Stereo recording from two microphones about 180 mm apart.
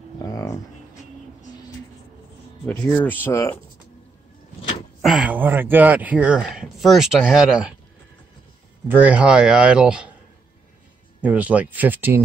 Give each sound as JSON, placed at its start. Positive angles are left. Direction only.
{"t": 0.2, "sound": "a sound", "side_deg": 20}
{"t": 2.6, "sound": "speech", "side_deg": 10}
{"t": 5.0, "sound": "speech", "side_deg": -5}
{"t": 8.8, "sound": "speech", "side_deg": -10}
{"t": 11.1, "sound": "speech", "side_deg": -10}